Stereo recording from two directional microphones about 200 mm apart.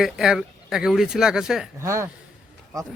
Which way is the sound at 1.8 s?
15° right (ahead or behind).